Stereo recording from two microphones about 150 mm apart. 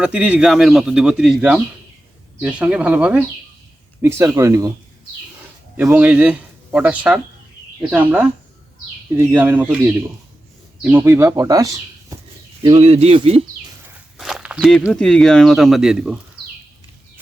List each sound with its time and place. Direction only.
0.0 s a man's voice: 10° right (ahead or behind)
5.7 s speech: 10° right (ahead or behind)
12.6 s speech: 45° right (ahead or behind)
14.2 s walk: centre (ahead or behind)
14.9 s a man's voice: 5° left (ahead or behind)